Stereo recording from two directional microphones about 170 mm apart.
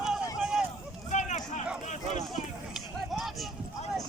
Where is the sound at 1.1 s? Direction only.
45° left (ahead or behind).